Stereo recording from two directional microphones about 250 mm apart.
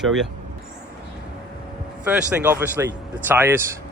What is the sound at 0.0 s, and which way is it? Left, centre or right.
Speech, centre.